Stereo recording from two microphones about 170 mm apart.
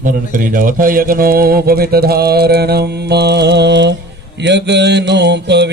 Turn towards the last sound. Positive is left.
turn(degrees=-90)